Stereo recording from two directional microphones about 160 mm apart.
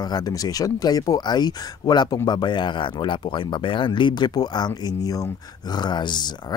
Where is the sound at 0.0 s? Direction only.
25° left (ahead or behind).